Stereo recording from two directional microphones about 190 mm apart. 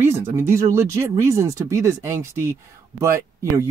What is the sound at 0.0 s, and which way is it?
Speech, 15° right (ahead or behind).